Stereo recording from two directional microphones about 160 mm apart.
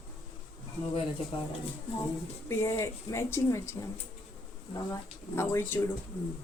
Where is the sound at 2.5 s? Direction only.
15° left (ahead or behind).